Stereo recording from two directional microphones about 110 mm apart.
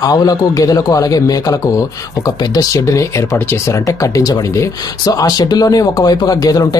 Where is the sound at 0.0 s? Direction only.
35° left (ahead or behind).